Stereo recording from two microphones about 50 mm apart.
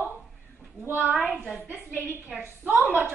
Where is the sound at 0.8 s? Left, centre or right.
Right.